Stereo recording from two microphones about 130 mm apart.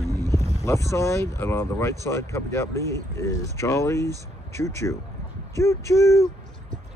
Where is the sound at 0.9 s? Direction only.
20° left (ahead or behind).